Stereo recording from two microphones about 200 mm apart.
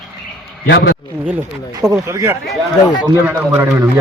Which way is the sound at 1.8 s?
15° right (ahead or behind).